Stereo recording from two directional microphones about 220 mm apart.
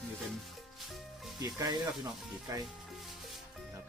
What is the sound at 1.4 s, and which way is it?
Speech, 20° right (ahead or behind).